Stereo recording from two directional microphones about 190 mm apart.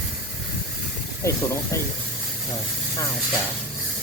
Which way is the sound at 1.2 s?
15° left (ahead or behind).